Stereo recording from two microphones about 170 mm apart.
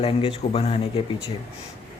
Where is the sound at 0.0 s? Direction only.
35° left (ahead or behind).